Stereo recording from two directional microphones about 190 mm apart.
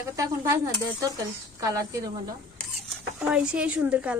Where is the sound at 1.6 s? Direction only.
15° right (ahead or behind).